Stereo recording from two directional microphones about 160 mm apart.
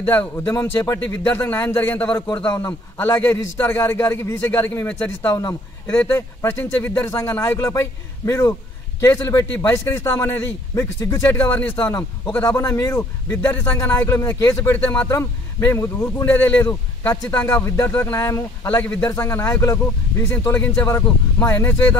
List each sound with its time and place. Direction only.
0.0 s a man's voice: 10° left (ahead or behind)